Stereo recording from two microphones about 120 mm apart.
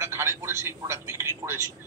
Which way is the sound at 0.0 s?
20° right (ahead or behind).